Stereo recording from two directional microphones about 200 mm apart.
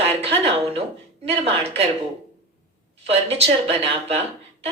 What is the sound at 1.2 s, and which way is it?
Speech, 30° right (ahead or behind).